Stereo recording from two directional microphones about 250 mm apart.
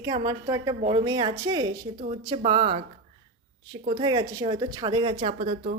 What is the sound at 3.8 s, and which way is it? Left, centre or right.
A woman's voice, centre.